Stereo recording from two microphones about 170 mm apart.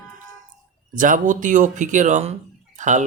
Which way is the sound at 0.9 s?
50° right (ahead or behind).